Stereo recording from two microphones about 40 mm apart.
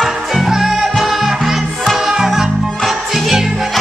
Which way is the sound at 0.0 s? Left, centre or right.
Centre.